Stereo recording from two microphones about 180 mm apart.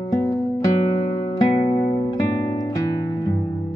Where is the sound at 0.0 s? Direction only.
25° left (ahead or behind).